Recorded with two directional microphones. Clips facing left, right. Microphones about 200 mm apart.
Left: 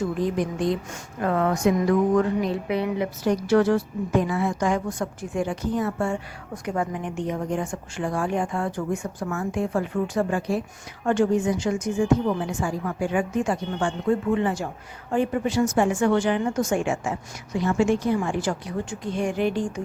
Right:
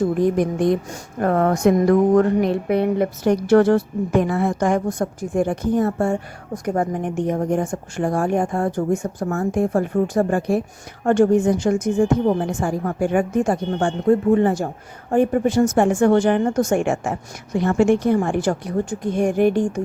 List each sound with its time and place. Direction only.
0.0 s a woman's voice: 55° right (ahead or behind)
16.7 s a woman's voice: 55° right (ahead or behind)